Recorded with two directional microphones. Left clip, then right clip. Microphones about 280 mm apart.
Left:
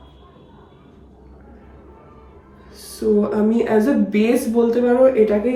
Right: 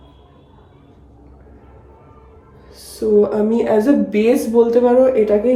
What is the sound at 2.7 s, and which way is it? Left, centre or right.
Speech, centre.